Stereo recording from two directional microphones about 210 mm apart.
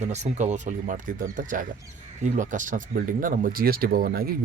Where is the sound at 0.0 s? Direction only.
35° right (ahead or behind).